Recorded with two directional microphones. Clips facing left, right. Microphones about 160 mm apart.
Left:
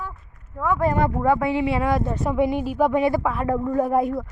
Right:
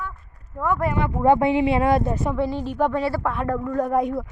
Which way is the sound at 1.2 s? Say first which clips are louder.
Right 7 dB; 25° right (ahead or behind).